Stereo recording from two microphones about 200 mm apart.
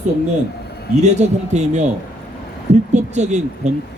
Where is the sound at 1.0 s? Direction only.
35° right (ahead or behind).